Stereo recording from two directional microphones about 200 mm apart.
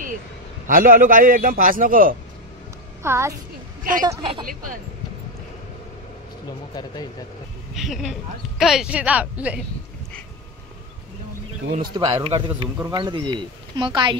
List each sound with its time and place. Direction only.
0.7 s a man's voice: 45° right (ahead or behind)
3.0 s a child's voice: 15° right (ahead or behind)
6.7 s speech: 20° left (ahead or behind)
7.7 s speech: centre (ahead or behind)
11.8 s a man's voice: 25° right (ahead or behind)